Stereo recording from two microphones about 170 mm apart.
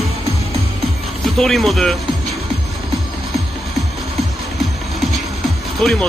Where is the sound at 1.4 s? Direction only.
Centre (ahead or behind).